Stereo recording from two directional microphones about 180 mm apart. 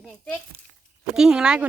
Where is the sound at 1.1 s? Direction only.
5° right (ahead or behind).